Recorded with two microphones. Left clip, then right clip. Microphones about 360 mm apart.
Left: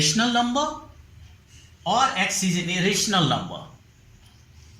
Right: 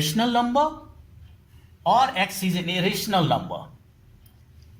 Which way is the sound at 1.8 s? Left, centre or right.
Right.